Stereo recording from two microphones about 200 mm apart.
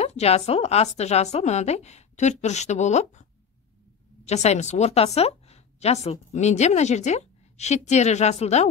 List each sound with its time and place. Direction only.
0.0 s speech: 30° left (ahead or behind)
4.3 s a woman's voice: 35° left (ahead or behind)